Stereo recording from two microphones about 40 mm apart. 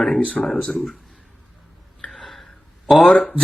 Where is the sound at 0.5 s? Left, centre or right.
Centre.